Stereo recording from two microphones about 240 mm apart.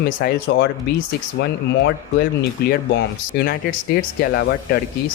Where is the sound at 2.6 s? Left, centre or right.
Left.